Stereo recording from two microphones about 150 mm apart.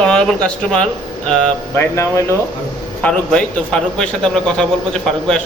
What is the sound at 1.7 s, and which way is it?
Speech, 15° left (ahead or behind).